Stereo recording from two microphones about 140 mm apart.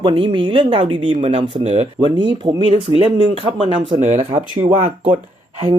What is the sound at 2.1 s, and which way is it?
Speech, 35° right (ahead or behind).